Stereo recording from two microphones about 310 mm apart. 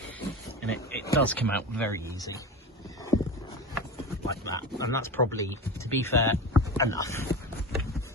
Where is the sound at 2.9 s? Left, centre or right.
Centre.